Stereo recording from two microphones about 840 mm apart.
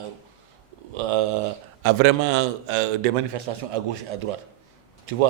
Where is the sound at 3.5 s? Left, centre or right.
Right.